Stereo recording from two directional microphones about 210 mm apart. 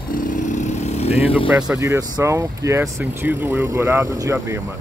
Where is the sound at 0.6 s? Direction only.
35° left (ahead or behind).